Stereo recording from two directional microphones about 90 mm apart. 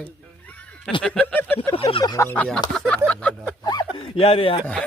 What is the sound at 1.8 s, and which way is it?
Fowl, 90° left.